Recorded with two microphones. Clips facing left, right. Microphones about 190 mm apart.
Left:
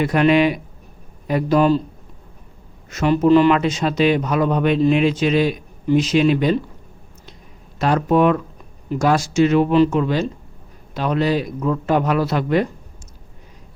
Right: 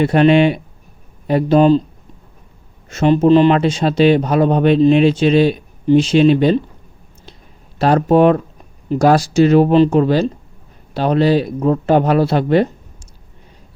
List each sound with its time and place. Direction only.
0.0 s speech: 30° right (ahead or behind)
2.9 s speech: 25° right (ahead or behind)
7.8 s speech: 35° right (ahead or behind)